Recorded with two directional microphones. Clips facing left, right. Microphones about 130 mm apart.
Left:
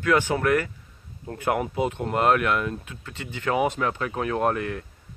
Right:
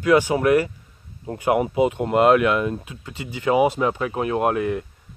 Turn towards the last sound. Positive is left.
turn(degrees=-10)  # may be behind; listen again after turning